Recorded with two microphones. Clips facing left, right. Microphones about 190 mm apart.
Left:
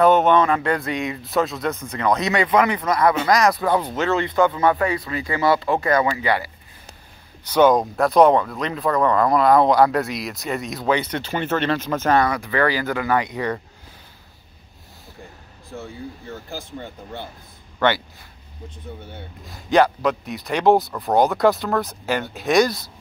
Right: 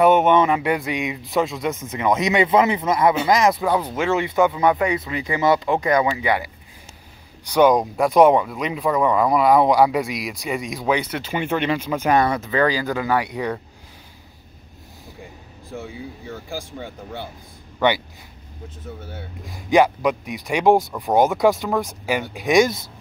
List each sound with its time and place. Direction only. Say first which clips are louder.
0.0 s speech: even; 15° right (ahead or behind)
15.7 s a man's voice: right 1 dB; 10° right (ahead or behind)
19.0 s speech: right 2 dB; 10° right (ahead or behind)